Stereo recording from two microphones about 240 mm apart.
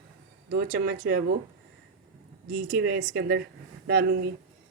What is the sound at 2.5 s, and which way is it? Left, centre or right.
Speech, right.